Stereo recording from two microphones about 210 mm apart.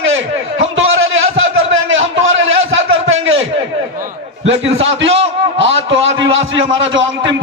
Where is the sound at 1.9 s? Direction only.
65° right (ahead or behind).